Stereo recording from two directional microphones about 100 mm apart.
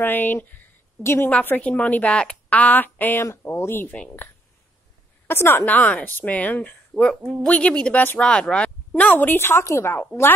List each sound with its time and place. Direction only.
0.0 s a woman's voice: 20° left (ahead or behind)
5.3 s a woman's voice: 25° left (ahead or behind)